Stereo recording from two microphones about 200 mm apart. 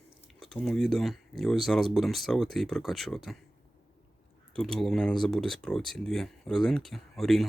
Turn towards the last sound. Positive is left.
turn(degrees=0)  # may be behind; listen again after turning